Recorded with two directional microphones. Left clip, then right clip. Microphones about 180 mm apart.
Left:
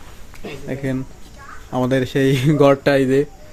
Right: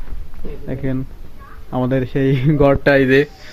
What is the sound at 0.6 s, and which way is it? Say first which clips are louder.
Speech: right 1 dB; 10° left (ahead or behind).